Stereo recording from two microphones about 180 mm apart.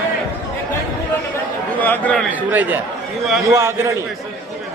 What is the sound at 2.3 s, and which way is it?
A man's voice, 10° right (ahead or behind).